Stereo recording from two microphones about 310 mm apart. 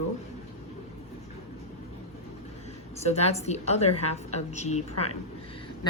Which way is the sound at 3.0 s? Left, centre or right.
Left.